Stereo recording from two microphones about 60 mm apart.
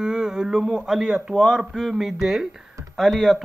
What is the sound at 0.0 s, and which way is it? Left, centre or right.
Speech, centre.